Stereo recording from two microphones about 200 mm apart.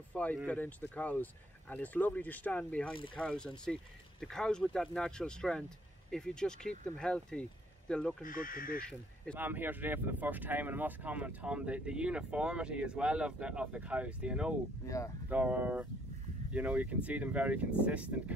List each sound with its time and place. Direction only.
0.1 s speech: 10° left (ahead or behind)
8.2 s speech: 45° left (ahead or behind)
9.3 s speech: 10° right (ahead or behind)